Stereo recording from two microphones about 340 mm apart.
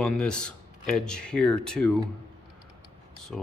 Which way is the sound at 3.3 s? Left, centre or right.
Centre.